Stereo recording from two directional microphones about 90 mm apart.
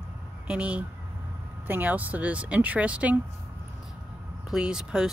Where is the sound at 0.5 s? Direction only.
10° right (ahead or behind).